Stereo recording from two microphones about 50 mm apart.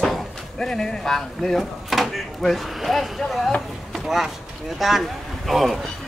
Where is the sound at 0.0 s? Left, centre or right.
Centre.